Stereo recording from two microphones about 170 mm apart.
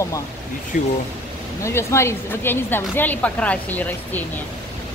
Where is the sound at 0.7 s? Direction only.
50° left (ahead or behind).